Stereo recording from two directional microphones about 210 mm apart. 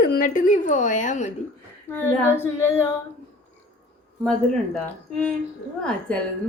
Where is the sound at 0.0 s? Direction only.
40° left (ahead or behind).